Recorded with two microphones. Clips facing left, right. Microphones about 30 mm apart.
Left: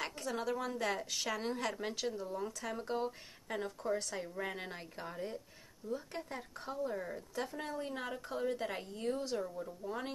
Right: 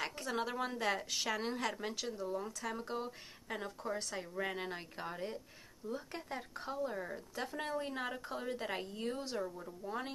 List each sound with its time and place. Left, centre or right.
0.0 s a sound: centre
0.3 s a woman's voice: right
0.7 s speech: centre
1.8 s speech: centre
7.5 s a woman's voice: right
7.8 s speech: centre